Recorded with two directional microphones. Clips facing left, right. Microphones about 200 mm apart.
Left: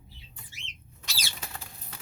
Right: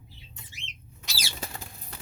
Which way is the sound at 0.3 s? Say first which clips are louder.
Right 4 dB; 20° right (ahead or behind).